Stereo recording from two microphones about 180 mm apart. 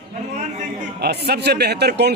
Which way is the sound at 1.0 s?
65° right (ahead or behind).